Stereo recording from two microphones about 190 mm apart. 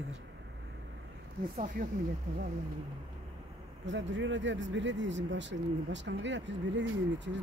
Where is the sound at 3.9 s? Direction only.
75° right (ahead or behind).